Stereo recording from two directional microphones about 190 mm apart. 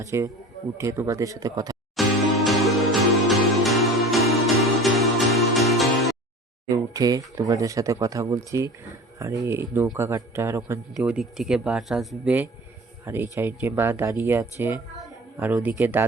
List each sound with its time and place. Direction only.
0.0 s a man's voice: 15° right (ahead or behind)
2.0 s music: centre (ahead or behind)
6.7 s a man's voice: 20° right (ahead or behind)